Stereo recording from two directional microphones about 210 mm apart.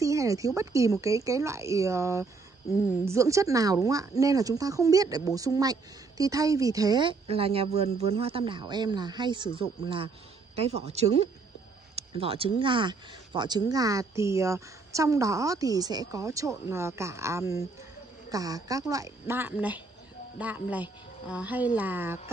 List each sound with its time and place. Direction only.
0.0 s a man's voice: 15° right (ahead or behind); by 11.2 s 30° right (ahead or behind)
11.9 s a sound: 25° right (ahead or behind)
12.5 s speech: 25° right (ahead or behind)